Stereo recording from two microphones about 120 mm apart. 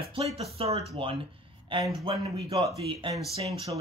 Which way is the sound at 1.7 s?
45° right (ahead or behind).